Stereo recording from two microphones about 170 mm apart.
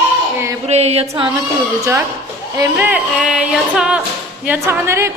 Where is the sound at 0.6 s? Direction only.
40° right (ahead or behind).